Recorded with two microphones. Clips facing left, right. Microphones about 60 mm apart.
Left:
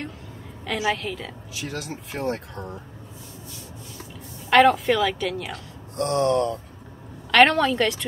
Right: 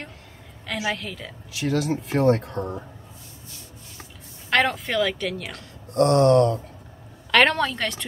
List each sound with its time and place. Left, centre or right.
0.7 s speech: centre
1.5 s speech: right
4.5 s speech: centre
5.9 s speech: right
7.2 s speech: centre